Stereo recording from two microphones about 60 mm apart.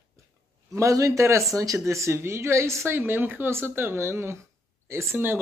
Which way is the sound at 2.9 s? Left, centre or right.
Right.